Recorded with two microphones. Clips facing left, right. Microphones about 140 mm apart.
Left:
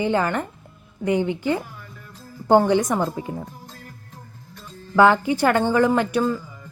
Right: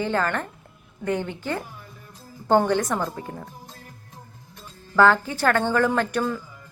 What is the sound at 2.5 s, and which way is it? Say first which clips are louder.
Speech: left 3 dB; 10° left (ahead or behind).